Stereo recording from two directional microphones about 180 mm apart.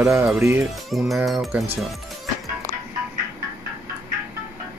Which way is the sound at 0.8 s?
Centre (ahead or behind).